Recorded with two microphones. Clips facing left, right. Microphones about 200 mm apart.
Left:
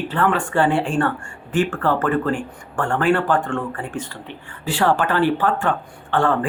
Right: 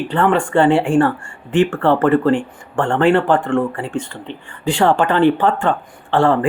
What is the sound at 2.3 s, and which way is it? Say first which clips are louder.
Speech: right 6 dB; 25° right (ahead or behind).